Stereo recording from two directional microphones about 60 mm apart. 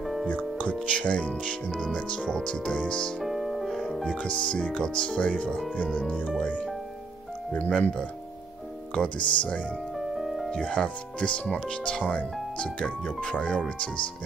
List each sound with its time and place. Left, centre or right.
0.0 s music: centre
0.7 s speech: centre
3.2 s speech: centre
7.5 s speech: left
8.9 s speech: centre
9.9 s music: centre
10.6 s speech: centre
12.6 s speech: centre